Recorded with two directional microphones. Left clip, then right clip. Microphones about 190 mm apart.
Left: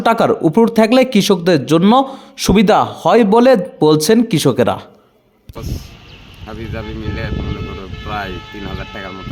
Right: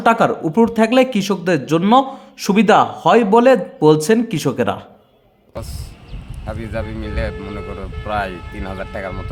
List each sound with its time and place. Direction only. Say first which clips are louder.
0.0 s speech: left 2 dB; 30° left (ahead or behind)
6.4 s speech: right 2 dB; 30° right (ahead or behind)